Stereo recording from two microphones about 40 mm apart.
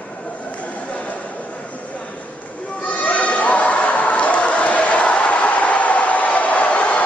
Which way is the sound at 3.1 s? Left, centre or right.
Left.